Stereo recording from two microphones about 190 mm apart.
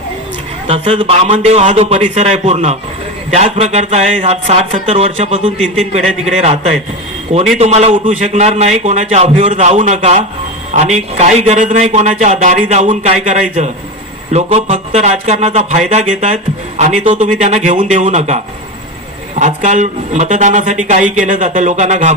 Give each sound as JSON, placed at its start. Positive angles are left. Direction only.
{"t": 0.7, "sound": "a man's voice", "side_deg": -25}
{"t": 5.5, "sound": "a man's voice", "side_deg": 0}
{"t": 6.3, "sound": "speech", "side_deg": -35}
{"t": 7.6, "sound": "speech", "side_deg": -35}
{"t": 19.4, "sound": "speech", "side_deg": -40}